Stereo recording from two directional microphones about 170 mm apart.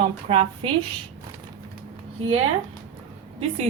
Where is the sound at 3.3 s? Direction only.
40° right (ahead or behind).